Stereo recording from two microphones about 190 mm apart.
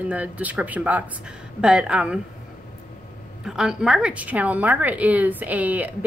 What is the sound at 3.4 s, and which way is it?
A woman's voice, 5° right (ahead or behind).